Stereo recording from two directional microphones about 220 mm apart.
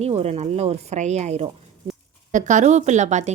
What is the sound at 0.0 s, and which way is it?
A woman's voice, 30° right (ahead or behind).